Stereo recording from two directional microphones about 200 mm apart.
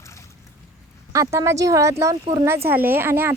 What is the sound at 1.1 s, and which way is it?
A woman's voice, 15° right (ahead or behind).